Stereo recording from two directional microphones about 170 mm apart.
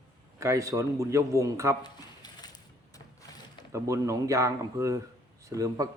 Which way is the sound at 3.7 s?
20° right (ahead or behind).